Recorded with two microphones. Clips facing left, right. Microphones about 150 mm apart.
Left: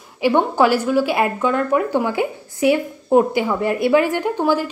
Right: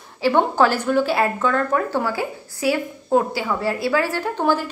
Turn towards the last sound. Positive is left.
turn(degrees=10)  # may be behind; listen again after turning